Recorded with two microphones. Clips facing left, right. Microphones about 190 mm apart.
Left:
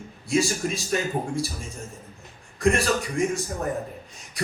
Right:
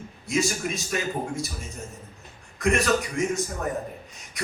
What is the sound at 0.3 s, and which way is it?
Speech, 35° left (ahead or behind).